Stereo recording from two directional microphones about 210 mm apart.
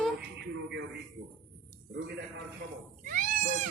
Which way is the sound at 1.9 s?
50° right (ahead or behind).